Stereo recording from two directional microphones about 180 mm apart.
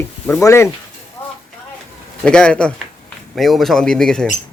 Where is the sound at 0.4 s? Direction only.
15° left (ahead or behind).